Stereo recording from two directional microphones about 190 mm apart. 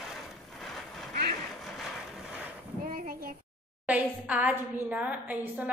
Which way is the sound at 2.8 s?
45° right (ahead or behind).